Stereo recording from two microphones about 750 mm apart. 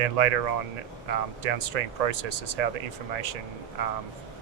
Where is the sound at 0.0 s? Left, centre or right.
Right.